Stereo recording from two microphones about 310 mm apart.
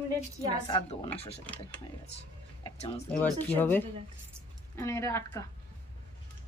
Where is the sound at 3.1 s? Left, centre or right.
Centre.